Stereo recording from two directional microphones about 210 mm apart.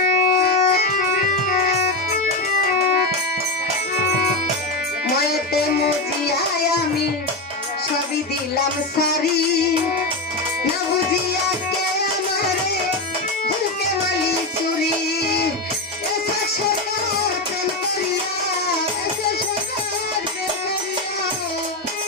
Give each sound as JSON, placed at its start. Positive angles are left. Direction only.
{"t": 0.0, "sound": "music", "side_deg": 45}